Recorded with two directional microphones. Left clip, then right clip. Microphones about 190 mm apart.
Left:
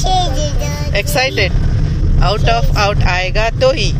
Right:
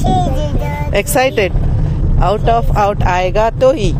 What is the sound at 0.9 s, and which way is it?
Speech, 50° right (ahead or behind).